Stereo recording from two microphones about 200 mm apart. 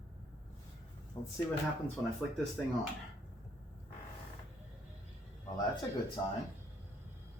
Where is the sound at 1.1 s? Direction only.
20° left (ahead or behind).